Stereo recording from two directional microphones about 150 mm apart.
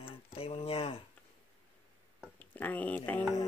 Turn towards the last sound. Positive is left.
turn(degrees=15)  # may be behind; listen again after turning